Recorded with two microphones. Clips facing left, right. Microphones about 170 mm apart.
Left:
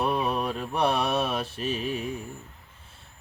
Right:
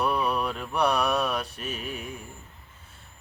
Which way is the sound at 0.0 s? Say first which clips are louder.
Even; 20° left (ahead or behind).